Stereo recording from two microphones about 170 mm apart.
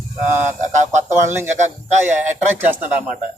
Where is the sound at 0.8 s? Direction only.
45° right (ahead or behind).